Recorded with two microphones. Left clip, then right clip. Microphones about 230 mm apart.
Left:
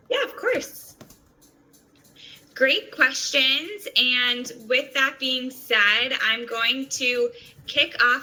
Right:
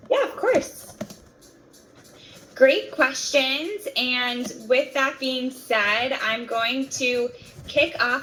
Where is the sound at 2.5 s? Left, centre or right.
Centre.